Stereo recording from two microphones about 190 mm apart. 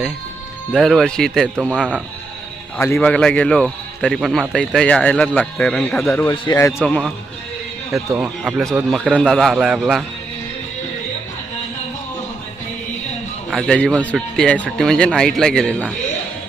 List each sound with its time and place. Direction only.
0.7 s a man's voice: centre (ahead or behind)
2.7 s a man's voice: 10° left (ahead or behind)
6.2 s a man's voice: 20° left (ahead or behind)
6.7 s a man's voice: centre (ahead or behind)
7.9 s a man's voice: 10° right (ahead or behind)
13.5 s a man's voice: 5° left (ahead or behind)